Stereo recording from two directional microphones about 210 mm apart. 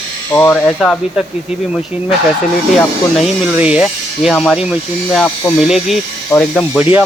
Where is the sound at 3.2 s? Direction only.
5° right (ahead or behind).